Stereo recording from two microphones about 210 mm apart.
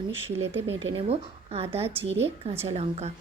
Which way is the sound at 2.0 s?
60° right (ahead or behind).